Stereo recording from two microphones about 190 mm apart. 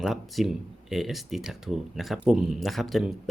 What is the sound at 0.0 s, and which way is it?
Speech, centre (ahead or behind).